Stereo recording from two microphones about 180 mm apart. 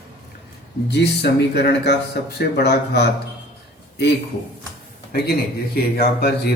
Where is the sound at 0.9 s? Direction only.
70° left (ahead or behind).